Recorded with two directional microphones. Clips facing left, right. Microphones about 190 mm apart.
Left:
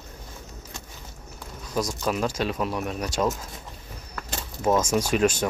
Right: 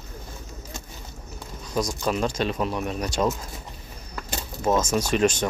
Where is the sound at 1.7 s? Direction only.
5° left (ahead or behind).